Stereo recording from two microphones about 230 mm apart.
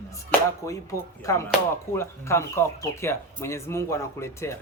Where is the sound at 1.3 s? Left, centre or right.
Centre.